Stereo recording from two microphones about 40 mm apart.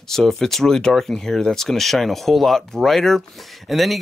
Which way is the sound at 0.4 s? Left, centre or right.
Centre.